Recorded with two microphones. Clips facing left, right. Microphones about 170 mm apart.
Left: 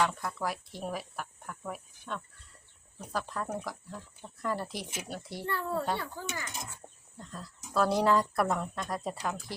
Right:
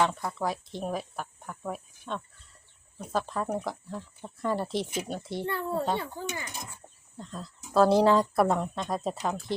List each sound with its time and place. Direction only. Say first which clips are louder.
0.0 s speech: right 3 dB; 25° right (ahead or behind)